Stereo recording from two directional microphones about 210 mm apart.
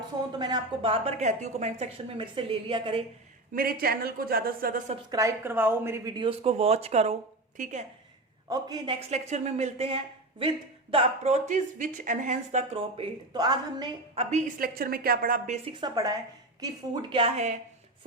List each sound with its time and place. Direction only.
0.3 s speech: 20° right (ahead or behind)
3.5 s a woman's voice: 45° right (ahead or behind)
5.1 s speech: 15° right (ahead or behind); by 7.9 s 35° right (ahead or behind)
8.4 s a woman's voice: 20° right (ahead or behind)
14.3 s a woman's voice: 35° right (ahead or behind)
15.6 s speech: 20° right (ahead or behind)